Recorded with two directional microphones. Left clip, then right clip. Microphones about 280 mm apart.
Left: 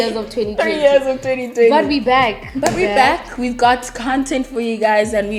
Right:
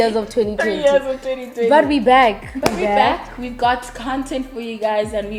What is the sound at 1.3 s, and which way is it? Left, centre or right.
Speech, left.